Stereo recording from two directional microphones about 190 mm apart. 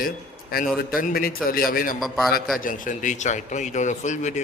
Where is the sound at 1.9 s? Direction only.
Centre (ahead or behind).